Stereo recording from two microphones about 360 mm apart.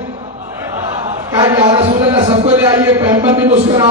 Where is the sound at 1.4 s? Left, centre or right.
Centre.